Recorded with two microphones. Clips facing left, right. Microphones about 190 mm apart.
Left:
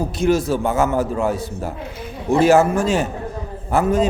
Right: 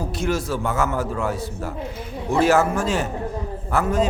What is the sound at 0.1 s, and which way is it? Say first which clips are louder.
A man's voice: left 7 dB; 20° left (ahead or behind).